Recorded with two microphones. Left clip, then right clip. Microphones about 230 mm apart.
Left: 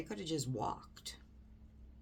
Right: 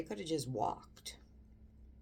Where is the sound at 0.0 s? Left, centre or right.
Centre.